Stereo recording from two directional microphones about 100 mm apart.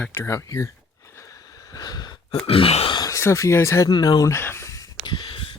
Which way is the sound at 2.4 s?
70° left (ahead or behind).